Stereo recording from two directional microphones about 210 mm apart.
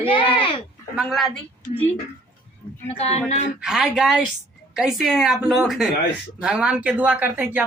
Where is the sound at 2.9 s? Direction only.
30° left (ahead or behind).